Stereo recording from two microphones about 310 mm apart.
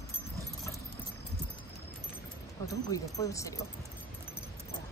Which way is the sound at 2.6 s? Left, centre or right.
Centre.